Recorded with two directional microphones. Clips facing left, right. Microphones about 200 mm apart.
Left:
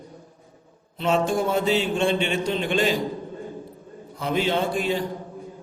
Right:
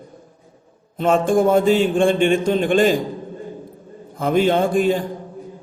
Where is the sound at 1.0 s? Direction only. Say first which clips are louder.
Right 6 dB; 50° right (ahead or behind).